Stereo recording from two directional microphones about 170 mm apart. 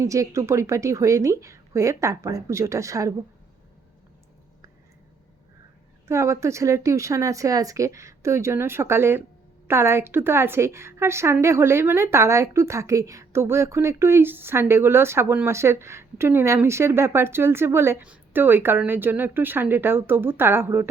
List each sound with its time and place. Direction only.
0.0 s a woman's voice: 20° right (ahead or behind)
6.1 s a woman's voice: 15° right (ahead or behind)